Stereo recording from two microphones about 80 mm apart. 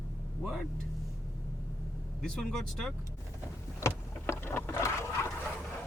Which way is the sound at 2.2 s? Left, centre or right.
Centre.